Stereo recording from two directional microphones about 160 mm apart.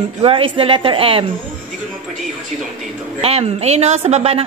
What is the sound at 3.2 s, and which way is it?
Speech, 40° right (ahead or behind).